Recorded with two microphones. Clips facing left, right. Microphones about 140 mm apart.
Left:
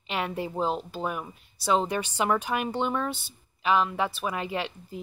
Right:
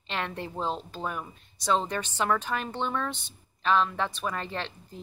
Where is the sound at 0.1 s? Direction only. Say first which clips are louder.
Left 3 dB; 10° left (ahead or behind).